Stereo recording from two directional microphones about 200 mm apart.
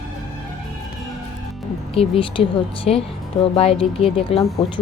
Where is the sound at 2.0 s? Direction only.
25° left (ahead or behind).